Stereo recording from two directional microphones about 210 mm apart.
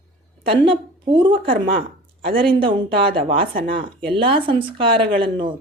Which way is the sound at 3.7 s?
25° right (ahead or behind).